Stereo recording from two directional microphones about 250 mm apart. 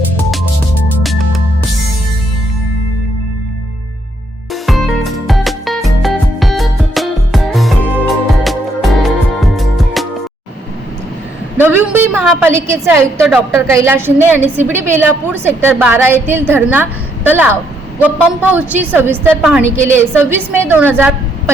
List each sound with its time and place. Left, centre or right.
4.6 s music: centre
11.5 s a sound: centre
13.1 s a woman's voice: centre